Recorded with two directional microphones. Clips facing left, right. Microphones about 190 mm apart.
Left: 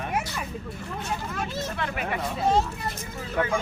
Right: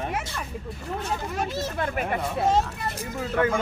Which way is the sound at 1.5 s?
45° right (ahead or behind).